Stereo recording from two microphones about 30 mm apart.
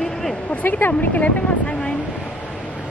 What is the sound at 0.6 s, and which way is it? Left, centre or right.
Speech, left.